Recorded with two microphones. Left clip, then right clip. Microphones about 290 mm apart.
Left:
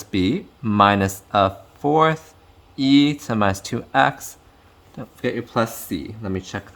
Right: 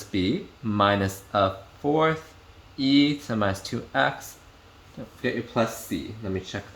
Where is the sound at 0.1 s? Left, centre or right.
Left.